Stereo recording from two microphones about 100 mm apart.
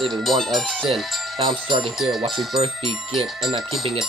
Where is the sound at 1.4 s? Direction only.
55° right (ahead or behind).